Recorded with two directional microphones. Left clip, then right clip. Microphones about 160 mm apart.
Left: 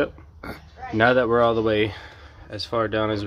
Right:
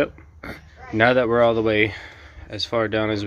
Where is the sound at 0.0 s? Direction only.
Centre (ahead or behind).